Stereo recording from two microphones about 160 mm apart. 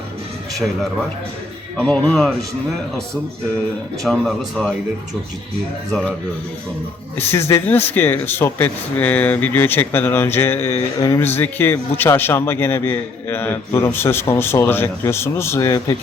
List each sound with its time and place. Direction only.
1.7 s speech: 5° left (ahead or behind)
4.0 s speech: centre (ahead or behind)
5.9 s speech: centre (ahead or behind)
7.2 s speech: 15° left (ahead or behind)